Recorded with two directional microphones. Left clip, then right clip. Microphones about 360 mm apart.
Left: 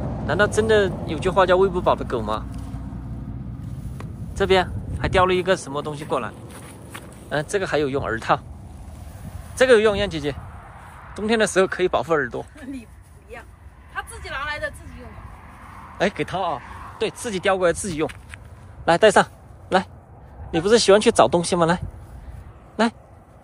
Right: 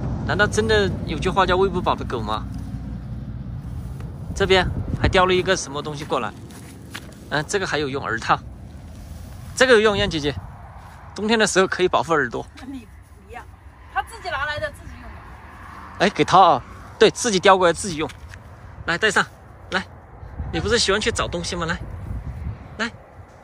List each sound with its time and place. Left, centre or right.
0.0 s vehicle: left
0.3 s speech: centre
4.0 s speech: centre
9.6 s speech: centre
14.2 s a sound: centre
15.6 s a sound: right
16.0 s speech: centre